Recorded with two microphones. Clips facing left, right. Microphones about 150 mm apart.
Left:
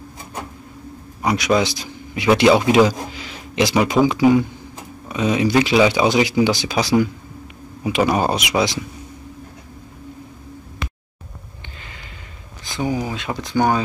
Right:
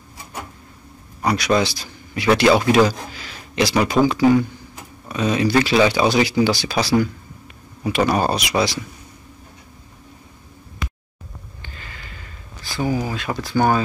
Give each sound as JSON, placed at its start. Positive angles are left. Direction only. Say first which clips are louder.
{"t": 1.2, "sound": "speech", "louder": "left 1 dB", "side_deg": 15}
{"t": 2.9, "sound": "a sound", "louder": "left 3 dB", "side_deg": 20}
{"t": 4.0, "sound": "speech", "louder": "even", "side_deg": 15}
{"t": 11.8, "sound": "sniff", "louder": "right 1 dB", "side_deg": 20}
{"t": 12.6, "sound": "speech", "louder": "even", "side_deg": 20}